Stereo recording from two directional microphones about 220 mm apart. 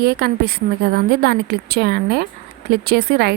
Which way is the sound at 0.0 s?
45° right (ahead or behind).